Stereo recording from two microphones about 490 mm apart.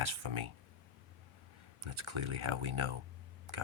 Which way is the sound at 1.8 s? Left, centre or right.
Right.